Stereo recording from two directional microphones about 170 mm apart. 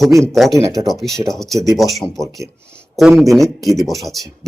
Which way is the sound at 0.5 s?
20° right (ahead or behind).